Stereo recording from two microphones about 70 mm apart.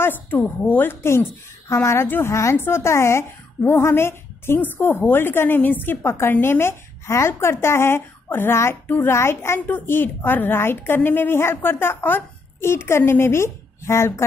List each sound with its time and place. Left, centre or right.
0.0 s a woman's voice: left
2.0 s a woman's voice: left